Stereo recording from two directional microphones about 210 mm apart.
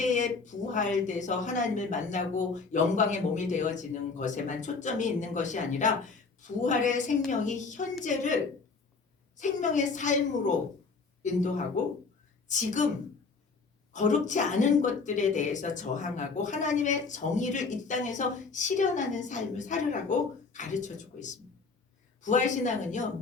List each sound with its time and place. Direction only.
0.0 s speech: 35° left (ahead or behind)
9.4 s speech: 35° left (ahead or behind)
13.9 s speech: 35° left (ahead or behind)